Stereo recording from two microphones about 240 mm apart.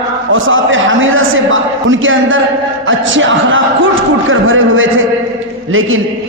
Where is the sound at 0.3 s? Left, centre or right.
Right.